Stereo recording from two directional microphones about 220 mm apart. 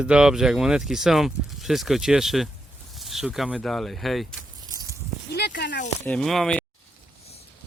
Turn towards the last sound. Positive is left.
turn(degrees=0)  # may be behind; listen again after turning